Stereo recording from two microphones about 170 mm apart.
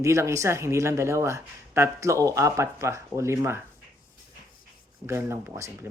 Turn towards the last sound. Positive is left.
turn(degrees=-15)  # may be behind; listen again after turning